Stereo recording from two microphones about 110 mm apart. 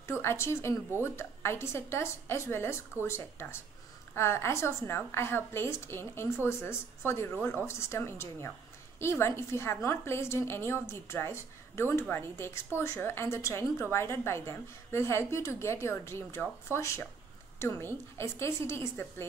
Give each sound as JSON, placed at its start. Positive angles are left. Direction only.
{"t": 0.2, "sound": "a woman's voice", "side_deg": 25}